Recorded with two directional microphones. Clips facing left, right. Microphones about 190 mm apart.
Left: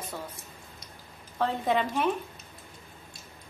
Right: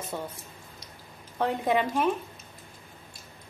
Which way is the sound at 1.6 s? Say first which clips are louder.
Right 2 dB; 10° right (ahead or behind).